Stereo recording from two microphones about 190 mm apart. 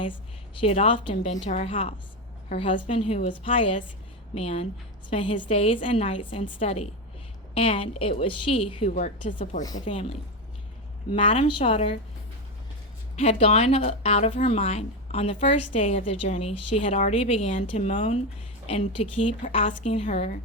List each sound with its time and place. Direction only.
0.6 s a woman's voice: 30° left (ahead or behind)
9.6 s a woman's voice: 25° left (ahead or behind)
13.1 s a woman's voice: 30° left (ahead or behind)